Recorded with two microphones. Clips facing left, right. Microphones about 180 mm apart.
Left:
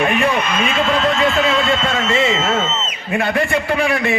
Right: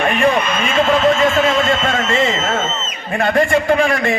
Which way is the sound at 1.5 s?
45° right (ahead or behind).